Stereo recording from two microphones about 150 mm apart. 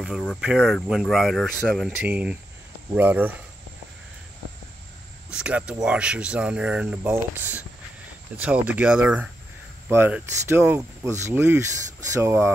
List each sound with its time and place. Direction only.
0.0 s speech: centre (ahead or behind)
5.3 s speech: 5° right (ahead or behind)